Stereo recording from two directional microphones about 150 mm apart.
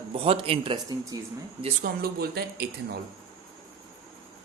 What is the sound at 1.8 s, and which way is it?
Speech, 90° right.